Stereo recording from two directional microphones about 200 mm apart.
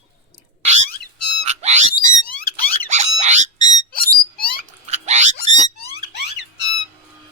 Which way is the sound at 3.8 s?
50° left (ahead or behind).